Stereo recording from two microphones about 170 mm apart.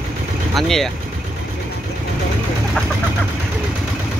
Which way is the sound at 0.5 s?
Centre (ahead or behind).